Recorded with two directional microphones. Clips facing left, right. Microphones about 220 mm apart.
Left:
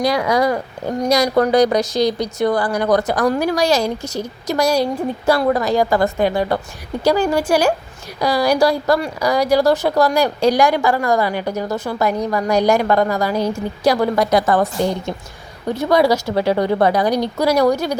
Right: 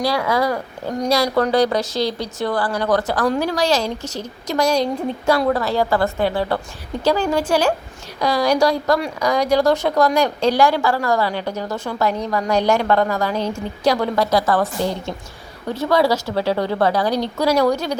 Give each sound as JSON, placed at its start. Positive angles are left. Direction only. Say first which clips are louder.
{"t": 0.0, "sound": "a woman's voice", "louder": "left 3 dB", "side_deg": 20}